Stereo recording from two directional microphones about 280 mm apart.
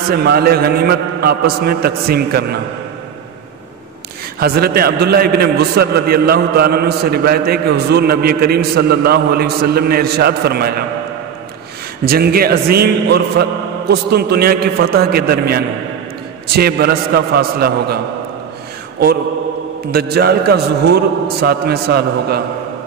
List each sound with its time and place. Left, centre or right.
0.1 s a man's voice: right
4.4 s a man's voice: right
12.1 s a man's voice: right
19.9 s a man's voice: right